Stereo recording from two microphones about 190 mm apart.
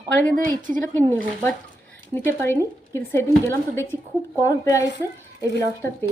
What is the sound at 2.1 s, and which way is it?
Speech, 10° left (ahead or behind).